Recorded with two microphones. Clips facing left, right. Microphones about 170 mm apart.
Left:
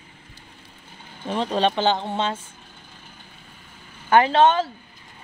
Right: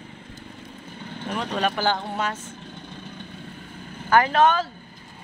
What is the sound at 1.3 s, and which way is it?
Speech, 30° left (ahead or behind).